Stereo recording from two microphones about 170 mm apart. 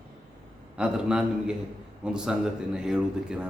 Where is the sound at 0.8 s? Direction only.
5° right (ahead or behind).